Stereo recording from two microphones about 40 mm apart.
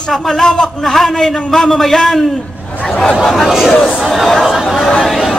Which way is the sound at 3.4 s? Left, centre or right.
Centre.